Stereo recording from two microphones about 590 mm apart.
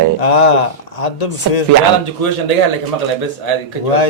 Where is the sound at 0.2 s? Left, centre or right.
Left.